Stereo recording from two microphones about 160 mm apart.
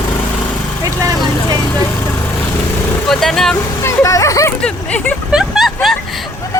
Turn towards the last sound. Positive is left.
turn(degrees=0)  # may be behind; listen again after turning